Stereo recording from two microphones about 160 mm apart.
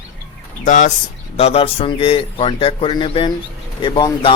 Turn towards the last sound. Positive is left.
turn(degrees=30)  # may be behind; listen again after turning